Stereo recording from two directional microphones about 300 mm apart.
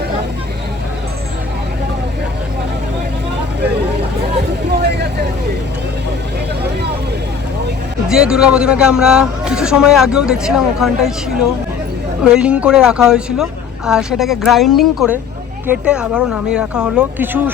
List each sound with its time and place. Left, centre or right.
4.7 s vehicle: right
8.0 s speech: centre